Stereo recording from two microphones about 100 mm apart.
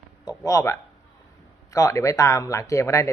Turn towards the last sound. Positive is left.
turn(degrees=30)  # may be behind; listen again after turning